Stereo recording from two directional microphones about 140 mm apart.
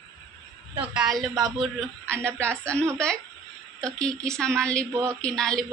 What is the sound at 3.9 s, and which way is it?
A woman's voice, 5° left (ahead or behind).